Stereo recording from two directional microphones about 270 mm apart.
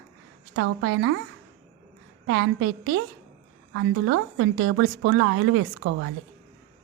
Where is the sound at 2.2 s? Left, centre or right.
Right.